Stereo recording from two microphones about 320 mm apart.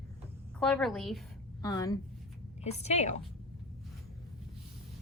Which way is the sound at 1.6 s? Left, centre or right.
Centre.